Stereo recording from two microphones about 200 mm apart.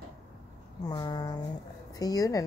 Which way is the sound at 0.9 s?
20° left (ahead or behind).